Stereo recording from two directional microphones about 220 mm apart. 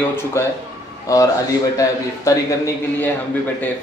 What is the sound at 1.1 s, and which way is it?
Speech, 15° left (ahead or behind).